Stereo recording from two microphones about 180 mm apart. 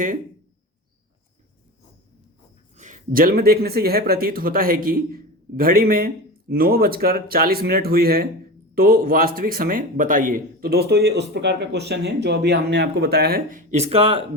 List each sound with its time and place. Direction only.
2.7 s speech: 40° right (ahead or behind)